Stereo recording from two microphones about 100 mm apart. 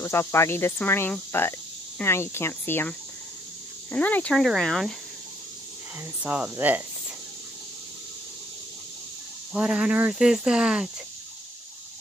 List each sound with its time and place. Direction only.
0.0 s speech: 25° left (ahead or behind); by 4.9 s 5° left (ahead or behind)
6.2 s speech: 15° right (ahead or behind)
9.5 s speech: 10° right (ahead or behind)